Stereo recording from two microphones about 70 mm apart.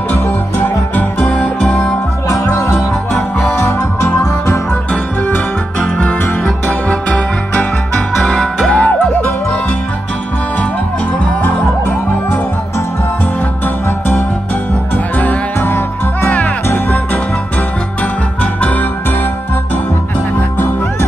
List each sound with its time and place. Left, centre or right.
0.6 s music: left
1.3 s music: centre
2.2 s music: left
6.4 s music: centre
8.7 s music: centre
13.8 s music: left
18.4 s music: left
20.3 s music: left